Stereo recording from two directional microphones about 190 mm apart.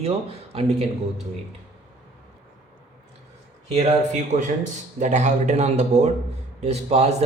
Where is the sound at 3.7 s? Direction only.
35° right (ahead or behind).